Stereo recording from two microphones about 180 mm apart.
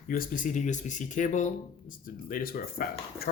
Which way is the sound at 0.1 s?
50° left (ahead or behind).